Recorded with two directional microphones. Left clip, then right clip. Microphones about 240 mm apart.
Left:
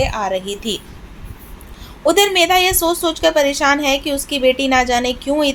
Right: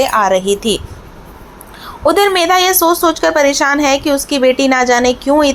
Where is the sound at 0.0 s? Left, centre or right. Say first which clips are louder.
Right 8 dB; right.